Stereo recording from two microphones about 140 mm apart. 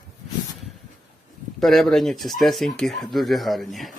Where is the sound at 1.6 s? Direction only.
Centre (ahead or behind).